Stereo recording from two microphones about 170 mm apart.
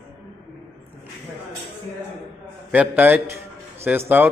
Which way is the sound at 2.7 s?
10° right (ahead or behind).